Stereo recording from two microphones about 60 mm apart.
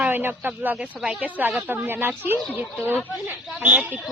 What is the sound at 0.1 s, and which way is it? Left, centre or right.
A woman's voice, right.